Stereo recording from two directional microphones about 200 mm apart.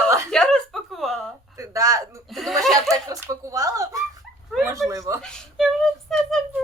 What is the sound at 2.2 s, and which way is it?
Speech, centre (ahead or behind).